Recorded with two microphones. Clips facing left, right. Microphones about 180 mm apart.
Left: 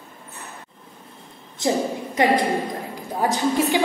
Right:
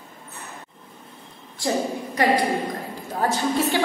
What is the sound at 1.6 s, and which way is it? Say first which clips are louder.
Speech: left 3 dB; 20° left (ahead or behind).